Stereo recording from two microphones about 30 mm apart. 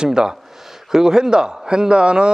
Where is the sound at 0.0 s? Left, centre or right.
Right.